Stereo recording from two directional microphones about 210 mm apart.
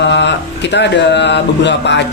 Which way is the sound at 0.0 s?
55° left (ahead or behind).